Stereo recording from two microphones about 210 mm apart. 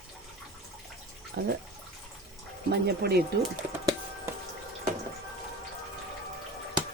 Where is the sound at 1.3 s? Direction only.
50° right (ahead or behind).